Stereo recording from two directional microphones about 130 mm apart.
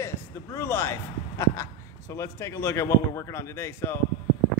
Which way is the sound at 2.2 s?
20° left (ahead or behind).